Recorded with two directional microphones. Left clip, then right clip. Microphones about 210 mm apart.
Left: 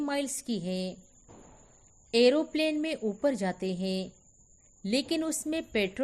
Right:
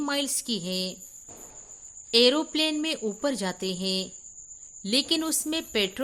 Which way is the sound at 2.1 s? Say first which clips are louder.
Right 3 dB; 25° right (ahead or behind).